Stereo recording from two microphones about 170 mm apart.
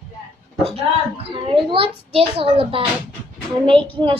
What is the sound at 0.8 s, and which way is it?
A woman's voice, 35° right (ahead or behind).